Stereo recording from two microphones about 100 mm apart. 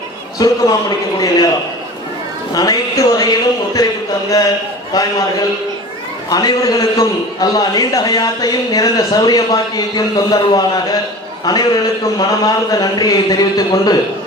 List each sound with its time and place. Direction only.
0.3 s a man's voice: 40° left (ahead or behind)
2.6 s speech: 40° left (ahead or behind)
6.3 s a man's voice: 40° left (ahead or behind)